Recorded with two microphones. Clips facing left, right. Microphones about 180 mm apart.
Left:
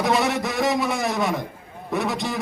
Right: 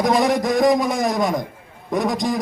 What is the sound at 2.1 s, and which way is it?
Speech, 40° right (ahead or behind).